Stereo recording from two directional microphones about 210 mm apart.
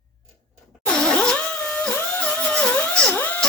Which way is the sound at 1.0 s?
5° left (ahead or behind).